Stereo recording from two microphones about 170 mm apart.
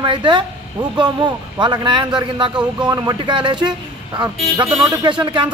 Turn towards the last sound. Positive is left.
turn(degrees=-30)  # may be behind; listen again after turning